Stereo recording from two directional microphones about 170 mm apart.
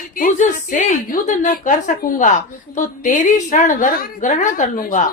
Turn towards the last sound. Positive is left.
turn(degrees=50)  # may be behind; listen again after turning